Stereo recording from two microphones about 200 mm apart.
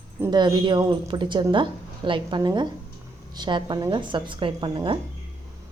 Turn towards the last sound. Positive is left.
turn(degrees=-25)  # may be behind; listen again after turning